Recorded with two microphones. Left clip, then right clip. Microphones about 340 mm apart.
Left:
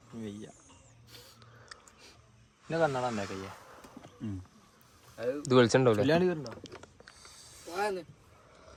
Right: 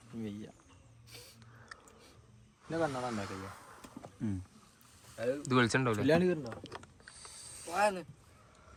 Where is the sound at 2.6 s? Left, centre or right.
Left.